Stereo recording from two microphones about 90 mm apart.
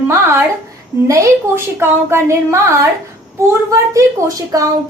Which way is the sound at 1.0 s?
35° right (ahead or behind).